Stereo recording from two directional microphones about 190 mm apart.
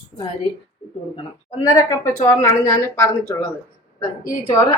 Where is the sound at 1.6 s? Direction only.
20° left (ahead or behind).